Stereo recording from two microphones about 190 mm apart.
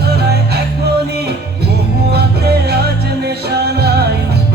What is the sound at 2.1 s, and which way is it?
Music, 60° right (ahead or behind).